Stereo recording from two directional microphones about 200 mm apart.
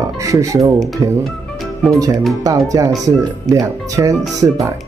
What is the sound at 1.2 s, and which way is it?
Music, centre (ahead or behind).